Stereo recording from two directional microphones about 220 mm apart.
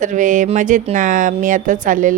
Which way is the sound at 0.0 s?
35° right (ahead or behind).